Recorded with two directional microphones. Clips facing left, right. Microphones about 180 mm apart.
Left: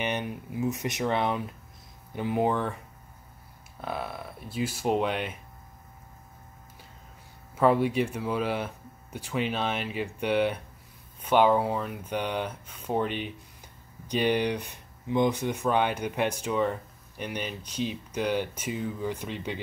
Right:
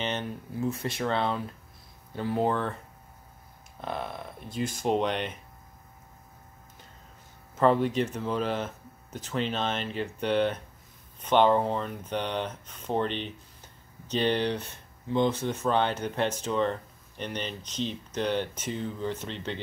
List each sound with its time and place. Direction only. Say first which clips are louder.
0.0 s speech: left 1 dB; 15° left (ahead or behind)
3.8 s speech: even; 5° left (ahead or behind)
7.5 s speech: even; 10° left (ahead or behind)